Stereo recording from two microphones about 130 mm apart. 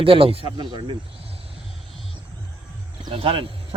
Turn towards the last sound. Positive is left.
turn(degrees=-45)  # may be behind; listen again after turning